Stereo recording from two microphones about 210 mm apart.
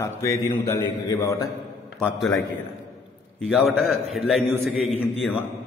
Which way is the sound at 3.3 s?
5° left (ahead or behind).